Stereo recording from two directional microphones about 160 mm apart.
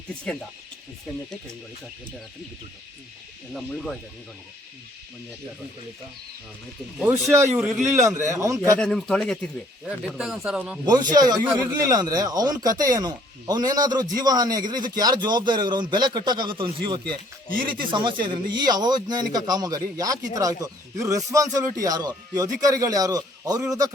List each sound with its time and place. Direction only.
3.5 s a man's voice: 5° left (ahead or behind)
7.0 s speech: 15° right (ahead or behind)
7.5 s a man's voice: 5° right (ahead or behind)
8.0 s a man's voice: 20° right (ahead or behind)
8.8 s a man's voice: 5° left (ahead or behind)
10.8 s a man's voice: 25° right (ahead or behind)